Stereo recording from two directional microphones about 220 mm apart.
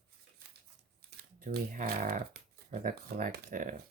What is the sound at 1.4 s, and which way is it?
Speech, 40° right (ahead or behind).